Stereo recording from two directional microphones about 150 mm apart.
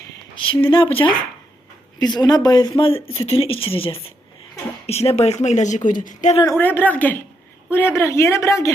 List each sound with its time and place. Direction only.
0.3 s speech: 35° left (ahead or behind); by 6.3 s 60° left (ahead or behind)
6.6 s speech: 15° left (ahead or behind)